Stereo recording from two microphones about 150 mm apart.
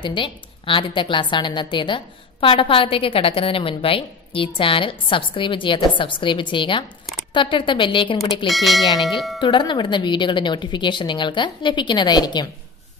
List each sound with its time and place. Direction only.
0.0 s a woman's voice: 35° left (ahead or behind)
8.5 s speech: centre (ahead or behind)
9.4 s a woman's voice: 30° left (ahead or behind)